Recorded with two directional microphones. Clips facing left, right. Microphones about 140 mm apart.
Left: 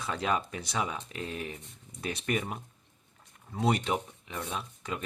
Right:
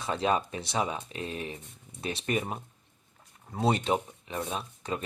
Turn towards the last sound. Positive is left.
turn(degrees=-30)  # may be behind; listen again after turning